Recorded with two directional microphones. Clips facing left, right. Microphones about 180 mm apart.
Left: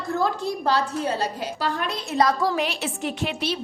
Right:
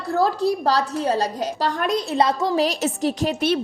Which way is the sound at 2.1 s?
25° right (ahead or behind).